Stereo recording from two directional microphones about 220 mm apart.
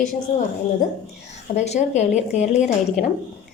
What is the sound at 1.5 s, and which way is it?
Speech, 30° left (ahead or behind).